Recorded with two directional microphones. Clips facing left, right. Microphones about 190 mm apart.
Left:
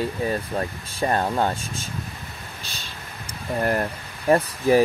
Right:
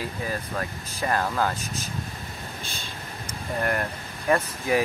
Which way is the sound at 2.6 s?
50° right (ahead or behind).